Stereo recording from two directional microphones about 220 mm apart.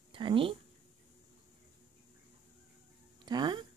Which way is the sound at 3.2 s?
20° right (ahead or behind).